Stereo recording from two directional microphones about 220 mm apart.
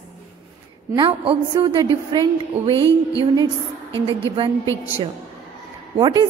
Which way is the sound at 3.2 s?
20° right (ahead or behind).